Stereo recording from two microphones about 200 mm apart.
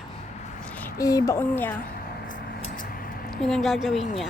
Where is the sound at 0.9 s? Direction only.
15° left (ahead or behind).